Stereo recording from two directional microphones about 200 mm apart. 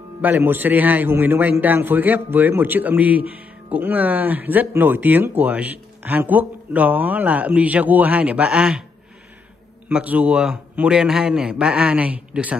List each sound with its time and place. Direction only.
0.2 s a man's voice: 10° right (ahead or behind)
9.8 s a man's voice: 5° right (ahead or behind)